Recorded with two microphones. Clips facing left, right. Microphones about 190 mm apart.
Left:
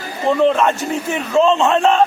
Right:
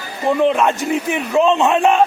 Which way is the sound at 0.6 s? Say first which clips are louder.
Right 1 dB; 15° right (ahead or behind).